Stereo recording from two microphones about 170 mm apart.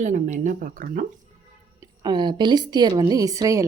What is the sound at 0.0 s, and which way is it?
Speech, 45° right (ahead or behind).